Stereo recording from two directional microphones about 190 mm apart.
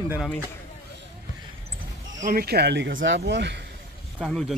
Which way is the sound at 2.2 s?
45° right (ahead or behind).